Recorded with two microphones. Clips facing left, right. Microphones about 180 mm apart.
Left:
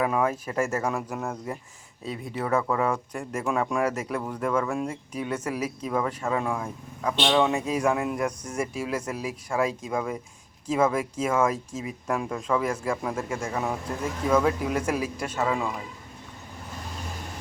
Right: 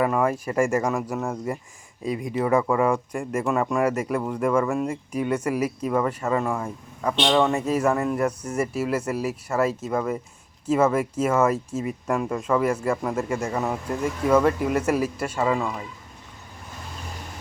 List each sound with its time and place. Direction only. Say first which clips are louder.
0.0 s speech: right 3 dB; centre (ahead or behind)